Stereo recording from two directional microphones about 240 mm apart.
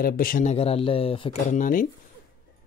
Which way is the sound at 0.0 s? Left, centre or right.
Left.